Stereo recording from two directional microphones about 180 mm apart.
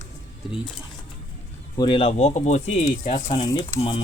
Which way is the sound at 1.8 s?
30° left (ahead or behind).